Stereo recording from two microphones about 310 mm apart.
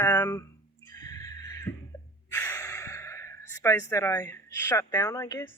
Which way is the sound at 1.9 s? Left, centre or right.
Centre.